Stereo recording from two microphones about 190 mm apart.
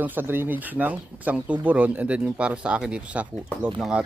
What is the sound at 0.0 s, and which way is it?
Speech, 10° right (ahead or behind).